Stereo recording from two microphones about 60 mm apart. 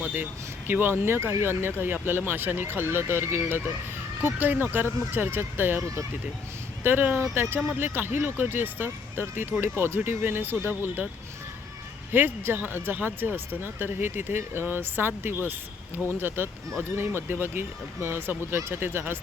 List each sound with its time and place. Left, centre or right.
0.0 s speech: right
6.8 s speech: right
12.1 s speech: right